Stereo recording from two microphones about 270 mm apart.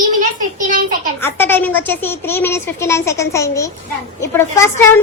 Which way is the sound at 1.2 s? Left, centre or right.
Centre.